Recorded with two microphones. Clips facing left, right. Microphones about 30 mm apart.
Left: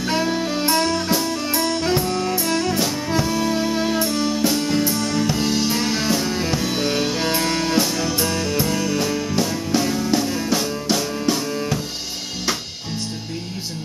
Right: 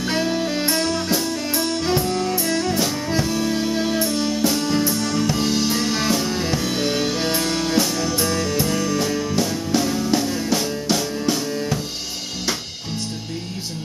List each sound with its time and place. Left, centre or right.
0.0 s saxophone: centre
0.7 s music: centre